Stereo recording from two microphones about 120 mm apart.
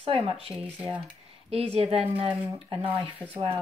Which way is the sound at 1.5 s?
55° right (ahead or behind).